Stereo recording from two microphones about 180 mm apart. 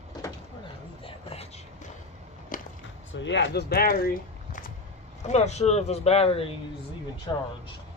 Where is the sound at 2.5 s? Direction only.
50° left (ahead or behind).